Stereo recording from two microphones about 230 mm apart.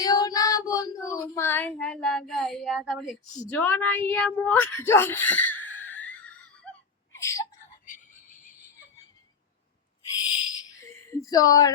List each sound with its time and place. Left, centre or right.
0.0 s child singing: centre
6.7 s a sound: centre
11.1 s speech: centre